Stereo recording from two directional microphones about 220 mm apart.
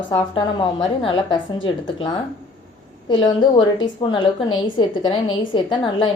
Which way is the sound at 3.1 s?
20° left (ahead or behind).